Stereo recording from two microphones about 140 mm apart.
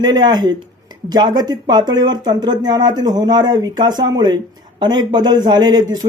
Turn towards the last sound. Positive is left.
turn(degrees=-30)  # may be behind; listen again after turning